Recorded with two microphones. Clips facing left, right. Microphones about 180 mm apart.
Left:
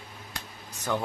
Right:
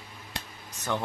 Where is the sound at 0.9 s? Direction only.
5° left (ahead or behind).